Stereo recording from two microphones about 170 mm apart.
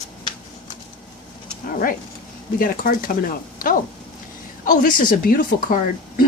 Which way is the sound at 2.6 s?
55° left (ahead or behind).